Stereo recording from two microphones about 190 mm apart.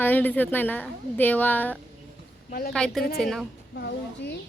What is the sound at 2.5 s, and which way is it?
Speech, 50° left (ahead or behind).